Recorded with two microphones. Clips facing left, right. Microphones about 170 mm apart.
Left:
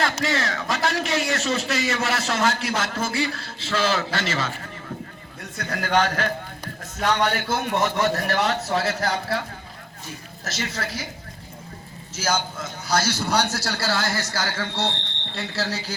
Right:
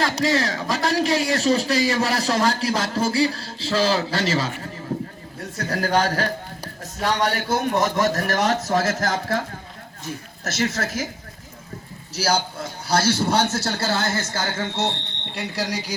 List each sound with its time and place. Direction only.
0.0 s a man's voice: 35° right (ahead or behind)
4.9 s vehicle: 35° right (ahead or behind)
5.4 s a man's voice: 40° right (ahead or behind)
10.4 s speech: 40° right (ahead or behind)
12.1 s a man's voice: 35° right (ahead or behind); by 16.0 s 15° right (ahead or behind)